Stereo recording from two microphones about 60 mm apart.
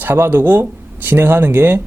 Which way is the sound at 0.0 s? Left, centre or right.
Right.